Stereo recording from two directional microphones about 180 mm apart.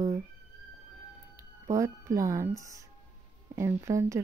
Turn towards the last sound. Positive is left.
turn(degrees=-15)  # may be behind; listen again after turning